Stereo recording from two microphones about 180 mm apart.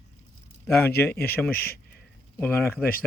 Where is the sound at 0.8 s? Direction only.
10° left (ahead or behind).